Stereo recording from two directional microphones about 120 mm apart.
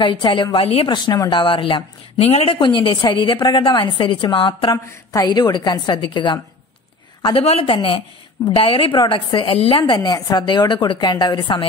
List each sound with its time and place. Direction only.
0.0 s a woman's voice: 45° left (ahead or behind)
0.8 s a woman's voice: 35° left (ahead or behind)
2.1 s a woman's voice: 60° left (ahead or behind)
4.6 s a woman's voice: 35° left (ahead or behind)
7.4 s speech: 60° left (ahead or behind)
7.7 s a woman's voice: 45° left (ahead or behind)